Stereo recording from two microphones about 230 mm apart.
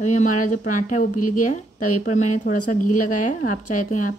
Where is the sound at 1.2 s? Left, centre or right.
Left.